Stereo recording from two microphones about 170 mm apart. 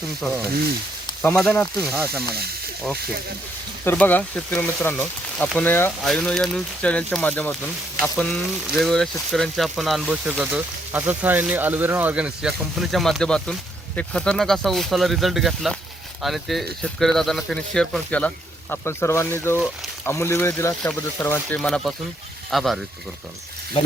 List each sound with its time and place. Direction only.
1.4 s speech: 5° left (ahead or behind)
2.3 s speech: 65° right (ahead or behind)
3.8 s speech: 10° left (ahead or behind)